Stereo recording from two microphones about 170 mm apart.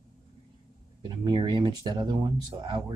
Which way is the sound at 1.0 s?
25° right (ahead or behind).